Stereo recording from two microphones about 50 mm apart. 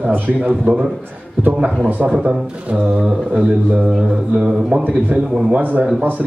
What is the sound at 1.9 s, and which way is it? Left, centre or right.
Speech, right.